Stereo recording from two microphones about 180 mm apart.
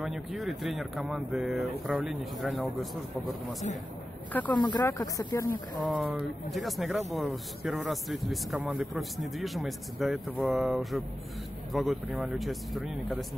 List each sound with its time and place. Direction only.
0.0 s speech: centre (ahead or behind)
4.6 s speech: 25° left (ahead or behind)
4.8 s speech: 15° left (ahead or behind)
5.8 s speech: 5° left (ahead or behind)